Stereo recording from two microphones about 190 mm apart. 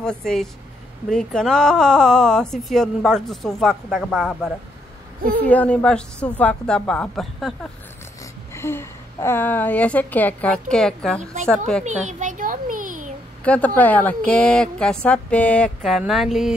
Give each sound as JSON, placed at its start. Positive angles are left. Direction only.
{"t": 0.0, "sound": "speech", "side_deg": 5}
{"t": 8.5, "sound": "a woman's voice", "side_deg": 15}
{"t": 11.8, "sound": "a sound", "side_deg": -40}
{"t": 13.4, "sound": "a woman's voice", "side_deg": 5}